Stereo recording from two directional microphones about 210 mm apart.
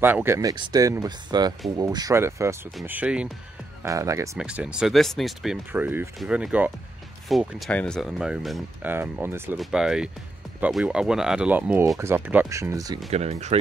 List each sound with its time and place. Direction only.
0.0 s speech: 10° right (ahead or behind)
13.1 s speech: 30° right (ahead or behind)